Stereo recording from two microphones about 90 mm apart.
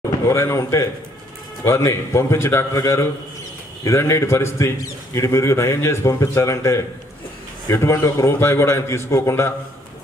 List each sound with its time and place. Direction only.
0.3 s a man's voice: 30° left (ahead or behind)